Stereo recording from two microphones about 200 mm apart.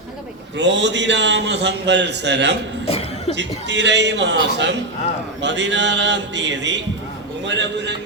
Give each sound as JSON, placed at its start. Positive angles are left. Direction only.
{"t": 0.5, "sound": "a man's voice", "side_deg": -60}
{"t": 2.8, "sound": "cough", "side_deg": 30}
{"t": 3.3, "sound": "a man's voice", "side_deg": -60}